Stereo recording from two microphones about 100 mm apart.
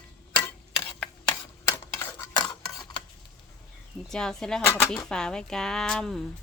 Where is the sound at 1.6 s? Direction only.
25° left (ahead or behind).